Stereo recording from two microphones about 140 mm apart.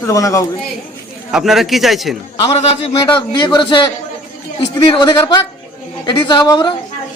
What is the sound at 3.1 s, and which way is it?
Speech, 35° left (ahead or behind).